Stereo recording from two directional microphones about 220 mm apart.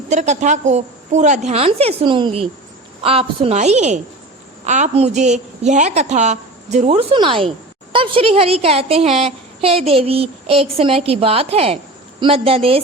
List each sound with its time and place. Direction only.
0.1 s a woman's voice: 30° right (ahead or behind)